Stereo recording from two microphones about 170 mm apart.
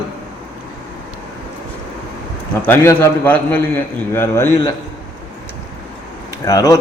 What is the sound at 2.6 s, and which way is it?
A man's voice, 15° left (ahead or behind).